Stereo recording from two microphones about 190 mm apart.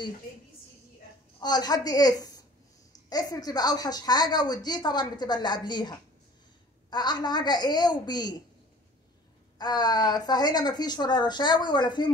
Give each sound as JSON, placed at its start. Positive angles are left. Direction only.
{"t": 1.4, "sound": "speech", "side_deg": 20}
{"t": 9.6, "sound": "speech", "side_deg": 20}